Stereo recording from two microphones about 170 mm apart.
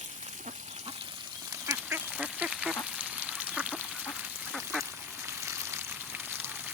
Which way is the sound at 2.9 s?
10° right (ahead or behind).